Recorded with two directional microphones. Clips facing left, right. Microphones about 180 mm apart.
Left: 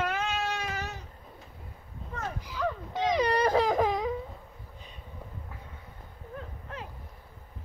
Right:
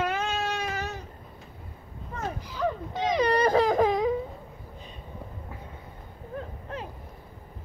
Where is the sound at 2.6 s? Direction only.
20° right (ahead or behind).